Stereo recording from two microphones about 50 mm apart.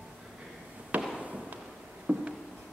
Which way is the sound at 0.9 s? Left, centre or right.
Right.